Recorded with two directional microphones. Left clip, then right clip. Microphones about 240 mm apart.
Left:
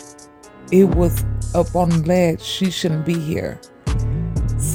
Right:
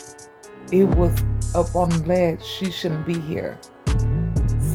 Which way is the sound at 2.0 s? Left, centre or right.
Left.